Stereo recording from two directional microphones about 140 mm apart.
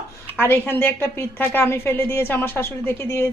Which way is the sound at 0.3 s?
15° left (ahead or behind).